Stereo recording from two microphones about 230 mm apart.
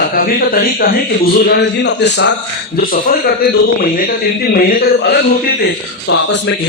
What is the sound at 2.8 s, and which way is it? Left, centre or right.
A man's voice, left.